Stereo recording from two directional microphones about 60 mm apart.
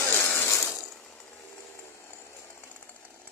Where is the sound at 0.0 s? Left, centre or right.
Left.